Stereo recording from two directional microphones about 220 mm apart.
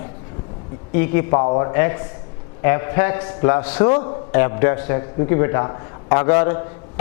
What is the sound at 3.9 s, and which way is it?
Speech, 25° left (ahead or behind).